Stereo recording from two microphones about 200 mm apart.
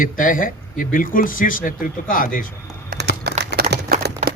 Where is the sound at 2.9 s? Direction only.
45° right (ahead or behind).